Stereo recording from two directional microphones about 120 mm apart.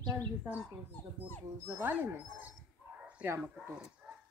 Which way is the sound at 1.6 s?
15° right (ahead or behind).